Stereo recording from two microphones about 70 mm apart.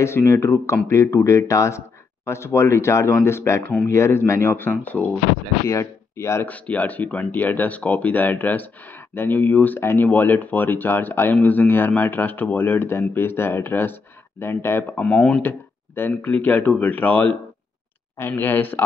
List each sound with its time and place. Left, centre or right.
0.0 s speech: left
5.7 s speech: left
6.4 s speech: left
15.0 s speech: centre
15.4 s speech: left
18.1 s speech: left